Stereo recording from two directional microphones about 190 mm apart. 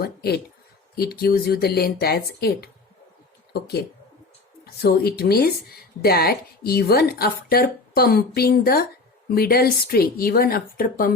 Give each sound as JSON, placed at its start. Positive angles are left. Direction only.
{"t": 0.0, "sound": "speech", "side_deg": 55}
{"t": 4.6, "sound": "a woman's voice", "side_deg": 55}